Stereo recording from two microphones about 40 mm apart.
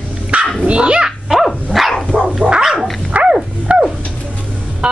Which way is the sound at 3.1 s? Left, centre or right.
Right.